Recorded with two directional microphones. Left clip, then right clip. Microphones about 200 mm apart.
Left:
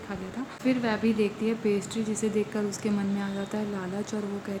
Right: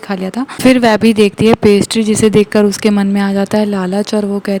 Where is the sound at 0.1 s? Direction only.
55° right (ahead or behind).